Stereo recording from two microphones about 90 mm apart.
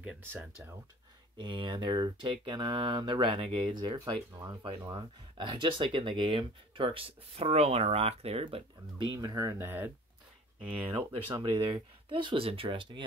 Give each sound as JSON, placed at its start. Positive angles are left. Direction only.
{"t": 1.4, "sound": "speech", "side_deg": -65}
{"t": 4.9, "sound": "speech", "side_deg": -60}
{"t": 9.6, "sound": "speech", "side_deg": -20}
{"t": 10.9, "sound": "speech", "side_deg": -65}